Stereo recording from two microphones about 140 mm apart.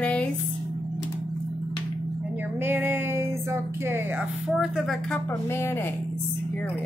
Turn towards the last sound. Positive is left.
turn(degrees=15)  # may be behind; listen again after turning